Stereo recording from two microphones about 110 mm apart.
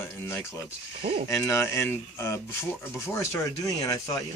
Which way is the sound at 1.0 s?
55° right (ahead or behind).